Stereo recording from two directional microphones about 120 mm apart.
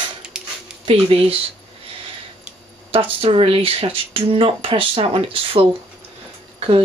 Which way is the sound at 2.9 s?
50° right (ahead or behind).